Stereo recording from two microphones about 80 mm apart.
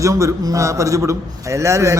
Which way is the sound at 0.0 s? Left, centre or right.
Right.